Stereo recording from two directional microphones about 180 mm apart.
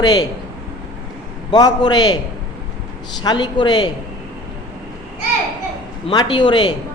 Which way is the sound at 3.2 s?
25° left (ahead or behind).